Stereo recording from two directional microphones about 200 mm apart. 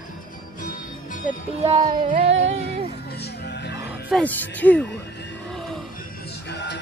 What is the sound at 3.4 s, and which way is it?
Music, 55° left (ahead or behind).